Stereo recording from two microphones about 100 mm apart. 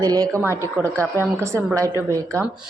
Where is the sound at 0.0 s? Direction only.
40° right (ahead or behind).